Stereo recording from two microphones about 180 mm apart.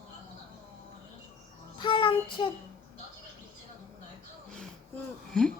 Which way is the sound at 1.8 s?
25° left (ahead or behind).